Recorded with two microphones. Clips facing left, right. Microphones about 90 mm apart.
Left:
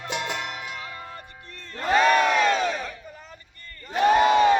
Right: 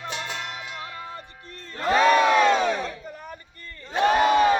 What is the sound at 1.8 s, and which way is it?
Crowd, 10° right (ahead or behind).